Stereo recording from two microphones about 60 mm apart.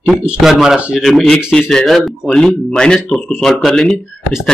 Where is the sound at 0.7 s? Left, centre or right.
Centre.